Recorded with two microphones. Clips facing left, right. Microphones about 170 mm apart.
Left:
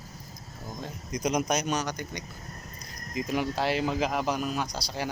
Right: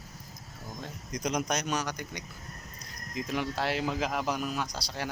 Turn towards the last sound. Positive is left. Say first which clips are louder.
# left 3 dB
turn(degrees=0)  # may be behind; listen again after turning